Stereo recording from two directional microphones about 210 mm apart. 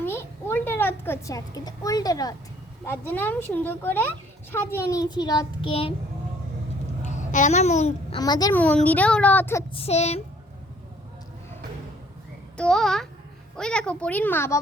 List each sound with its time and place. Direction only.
0.0 s a sound: 10° left (ahead or behind)
3.1 s a child's voice: 10° left (ahead or behind); by 5.9 s 25° left (ahead or behind)
7.0 s a child's voice: 35° left (ahead or behind)
8.2 s a child's voice: 15° left (ahead or behind)
8.6 s a child's voice: 5° left (ahead or behind)
9.7 s speech: 30° left (ahead or behind)
12.5 s a child's voice: 5° left (ahead or behind)